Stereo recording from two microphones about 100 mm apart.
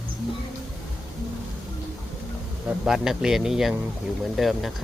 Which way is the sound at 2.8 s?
5° right (ahead or behind).